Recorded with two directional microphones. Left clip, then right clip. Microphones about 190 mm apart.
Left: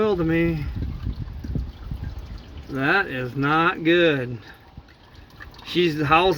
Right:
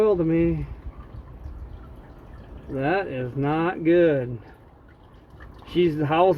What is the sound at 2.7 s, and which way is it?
Speech, 60° left (ahead or behind).